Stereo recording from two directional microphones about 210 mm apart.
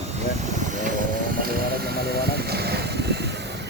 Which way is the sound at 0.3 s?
35° right (ahead or behind).